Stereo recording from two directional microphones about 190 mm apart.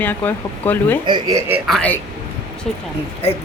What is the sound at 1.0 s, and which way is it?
Speech, 20° right (ahead or behind).